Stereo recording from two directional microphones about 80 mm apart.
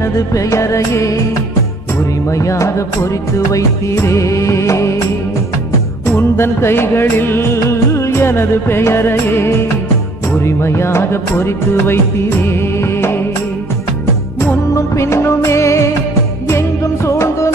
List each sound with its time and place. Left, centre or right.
0.0 s music of bollywood: left
2.3 s music of bollywood: left
6.0 s music: left
10.4 s music of bollywood: left
14.7 s music: left